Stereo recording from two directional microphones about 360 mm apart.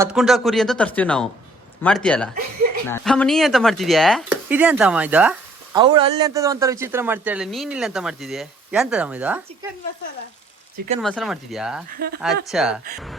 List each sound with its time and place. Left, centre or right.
0.0 s speech: centre
11.0 s speech: centre
11.9 s speech: right
12.5 s speech: centre